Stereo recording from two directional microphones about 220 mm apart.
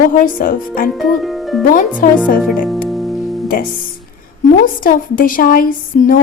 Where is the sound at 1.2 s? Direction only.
Centre (ahead or behind).